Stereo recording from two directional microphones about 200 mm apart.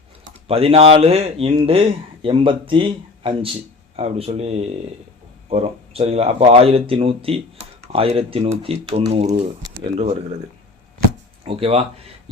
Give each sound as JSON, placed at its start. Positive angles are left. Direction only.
{"t": 0.4, "sound": "speech", "side_deg": -30}
{"t": 11.4, "sound": "speech", "side_deg": -30}